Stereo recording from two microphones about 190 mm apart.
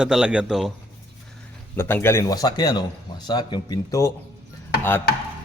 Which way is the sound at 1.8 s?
10° left (ahead or behind).